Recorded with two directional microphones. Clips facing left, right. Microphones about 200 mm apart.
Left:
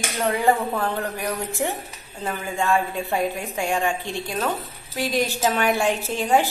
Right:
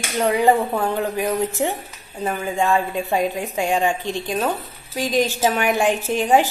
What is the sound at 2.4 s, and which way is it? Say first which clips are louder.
A woman's voice: right 2 dB; 15° right (ahead or behind).